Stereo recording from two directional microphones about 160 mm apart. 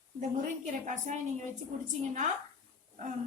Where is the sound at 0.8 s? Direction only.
50° right (ahead or behind).